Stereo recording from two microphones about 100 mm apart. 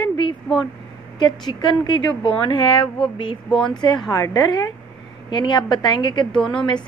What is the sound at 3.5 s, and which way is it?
Speech, 5° left (ahead or behind).